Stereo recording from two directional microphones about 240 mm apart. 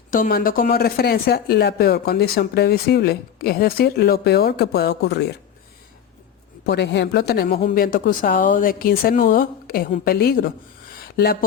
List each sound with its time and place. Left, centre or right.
0.1 s speech: left
6.7 s speech: left